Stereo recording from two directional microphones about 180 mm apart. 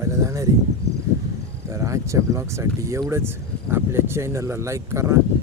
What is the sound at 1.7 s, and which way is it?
Speech, 15° right (ahead or behind).